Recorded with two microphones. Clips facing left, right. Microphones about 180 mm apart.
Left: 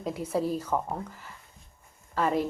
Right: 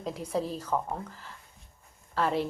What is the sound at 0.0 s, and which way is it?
A woman's voice, 5° left (ahead or behind).